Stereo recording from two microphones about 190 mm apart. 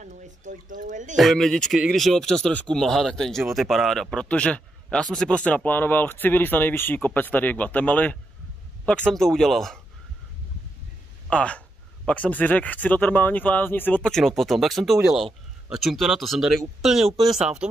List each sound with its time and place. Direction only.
0.0 s speech: 40° right (ahead or behind)
1.1 s speech: centre (ahead or behind)
11.2 s speech: 5° left (ahead or behind)